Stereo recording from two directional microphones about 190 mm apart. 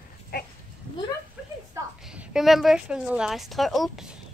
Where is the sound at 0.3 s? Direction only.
55° left (ahead or behind).